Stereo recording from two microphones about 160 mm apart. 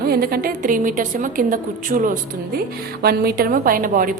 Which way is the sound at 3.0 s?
75° right (ahead or behind).